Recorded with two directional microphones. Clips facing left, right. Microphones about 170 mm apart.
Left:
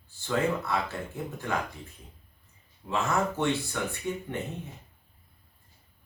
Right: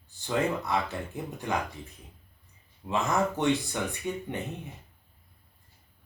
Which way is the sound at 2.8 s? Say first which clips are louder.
Right 1 dB; 15° right (ahead or behind).